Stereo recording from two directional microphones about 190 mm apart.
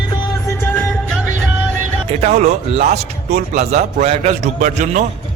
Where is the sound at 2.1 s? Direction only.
35° right (ahead or behind).